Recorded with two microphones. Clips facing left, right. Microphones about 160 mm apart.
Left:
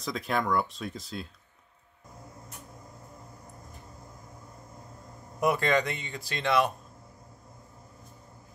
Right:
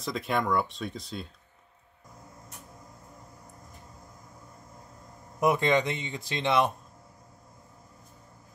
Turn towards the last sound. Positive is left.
turn(degrees=-25)  # may be behind; listen again after turning